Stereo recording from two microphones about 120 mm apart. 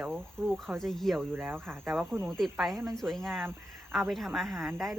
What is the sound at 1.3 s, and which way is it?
Speech, 20° right (ahead or behind).